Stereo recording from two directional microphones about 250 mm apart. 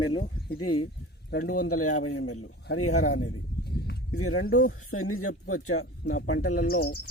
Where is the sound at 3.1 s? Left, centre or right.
Left.